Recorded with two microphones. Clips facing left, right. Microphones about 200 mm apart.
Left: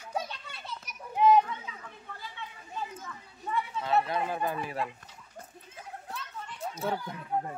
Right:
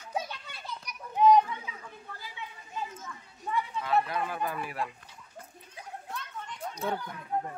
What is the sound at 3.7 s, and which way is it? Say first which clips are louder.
Speech: left 1 dB; 25° left (ahead or behind).